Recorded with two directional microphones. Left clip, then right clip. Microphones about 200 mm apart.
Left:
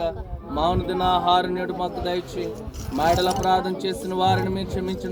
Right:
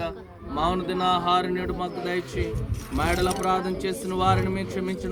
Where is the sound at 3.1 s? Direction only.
15° left (ahead or behind).